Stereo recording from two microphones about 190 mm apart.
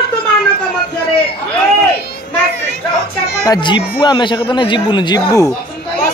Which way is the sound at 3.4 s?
20° left (ahead or behind).